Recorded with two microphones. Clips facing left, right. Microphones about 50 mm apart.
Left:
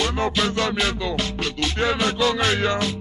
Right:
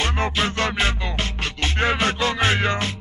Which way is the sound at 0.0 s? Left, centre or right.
Right.